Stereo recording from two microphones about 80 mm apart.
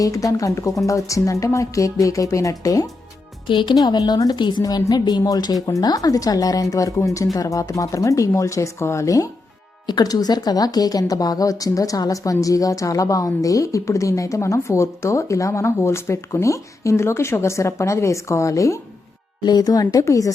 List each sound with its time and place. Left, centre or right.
0.0 s speech: left
3.5 s speech: left
3.8 s speech: left
4.6 s speech: left
9.8 s speech: left
19.4 s speech: left